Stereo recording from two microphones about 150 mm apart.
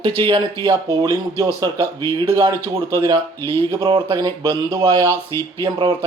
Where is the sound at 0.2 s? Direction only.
30° right (ahead or behind).